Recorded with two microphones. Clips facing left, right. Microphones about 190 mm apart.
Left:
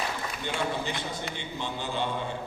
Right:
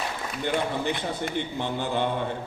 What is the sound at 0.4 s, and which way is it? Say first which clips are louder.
A man's voice: right 5 dB; 55° right (ahead or behind).